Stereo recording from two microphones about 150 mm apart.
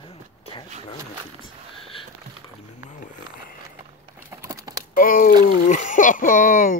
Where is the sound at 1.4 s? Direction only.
35° left (ahead or behind).